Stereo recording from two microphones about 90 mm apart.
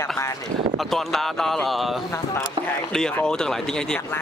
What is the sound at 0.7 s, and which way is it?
Speech, 5° left (ahead or behind).